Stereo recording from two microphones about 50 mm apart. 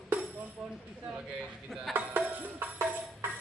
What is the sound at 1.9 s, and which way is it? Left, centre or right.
Music, right.